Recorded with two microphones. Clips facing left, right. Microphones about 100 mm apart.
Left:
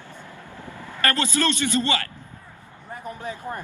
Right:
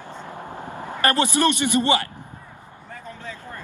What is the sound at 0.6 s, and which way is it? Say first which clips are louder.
A man's voice: right 3 dB; 25° right (ahead or behind).